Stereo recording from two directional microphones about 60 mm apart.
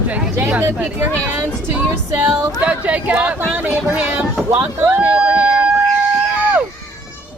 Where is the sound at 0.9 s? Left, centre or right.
Right.